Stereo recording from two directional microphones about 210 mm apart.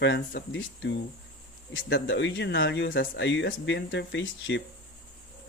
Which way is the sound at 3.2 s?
60° left (ahead or behind).